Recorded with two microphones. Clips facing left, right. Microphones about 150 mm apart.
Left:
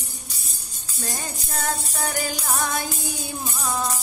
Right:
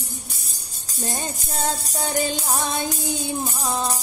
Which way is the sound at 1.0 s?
25° right (ahead or behind).